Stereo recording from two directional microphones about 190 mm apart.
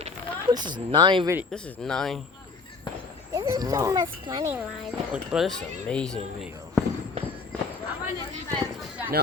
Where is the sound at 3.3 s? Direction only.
15° right (ahead or behind).